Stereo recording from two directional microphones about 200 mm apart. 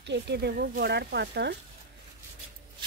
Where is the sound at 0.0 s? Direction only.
60° right (ahead or behind).